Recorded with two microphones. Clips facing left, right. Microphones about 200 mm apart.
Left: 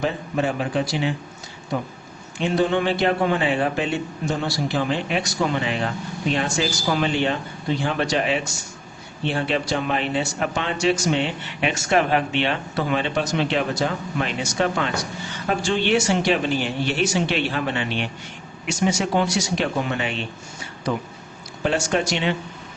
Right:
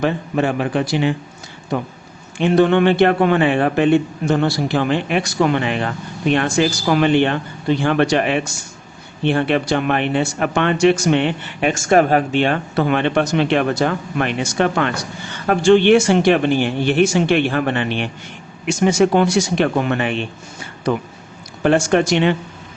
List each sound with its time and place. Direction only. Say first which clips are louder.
0.0 s a man's voice: right 5 dB; 60° right (ahead or behind)
2.4 s a man's voice: right 7 dB; 60° right (ahead or behind)
21.6 s speech: right 7 dB; 55° right (ahead or behind)